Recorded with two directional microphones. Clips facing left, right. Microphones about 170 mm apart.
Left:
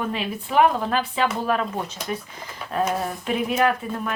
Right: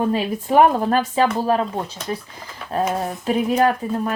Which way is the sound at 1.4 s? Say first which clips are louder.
Right 4 dB; 35° right (ahead or behind).